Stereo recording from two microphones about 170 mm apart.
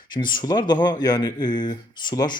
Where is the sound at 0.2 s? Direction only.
25° left (ahead or behind).